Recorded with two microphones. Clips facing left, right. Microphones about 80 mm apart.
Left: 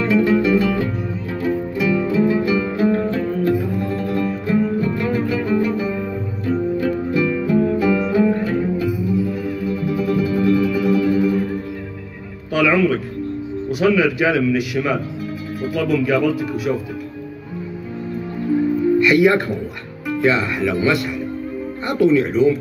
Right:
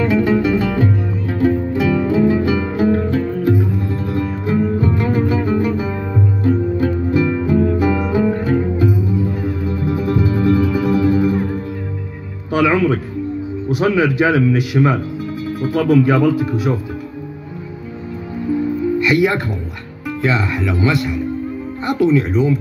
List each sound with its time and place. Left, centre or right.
0.0 s music: right
12.5 s music: right
13.7 s speech: right
18.9 s speech: centre